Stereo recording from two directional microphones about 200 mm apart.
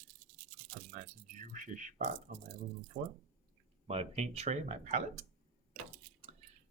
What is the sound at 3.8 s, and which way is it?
Speech, 30° right (ahead or behind).